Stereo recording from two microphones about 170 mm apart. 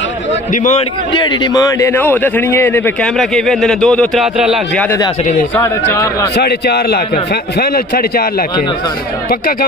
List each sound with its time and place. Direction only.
0.5 s a man's voice: 45° left (ahead or behind)
1.1 s a man's voice: 25° left (ahead or behind); by 4.6 s 5° right (ahead or behind)
4.7 s a man's voice: 10° left (ahead or behind)
6.3 s a man's voice: 75° left (ahead or behind)